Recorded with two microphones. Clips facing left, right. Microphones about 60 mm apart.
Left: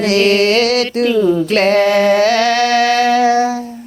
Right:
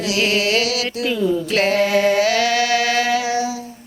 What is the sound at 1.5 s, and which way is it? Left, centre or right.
Music, left.